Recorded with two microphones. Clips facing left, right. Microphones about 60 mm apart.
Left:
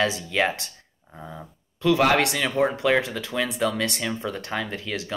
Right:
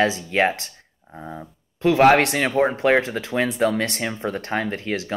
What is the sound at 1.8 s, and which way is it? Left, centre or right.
Speech, right.